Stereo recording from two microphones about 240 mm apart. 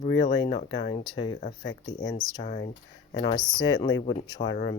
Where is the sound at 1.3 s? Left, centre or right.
Left.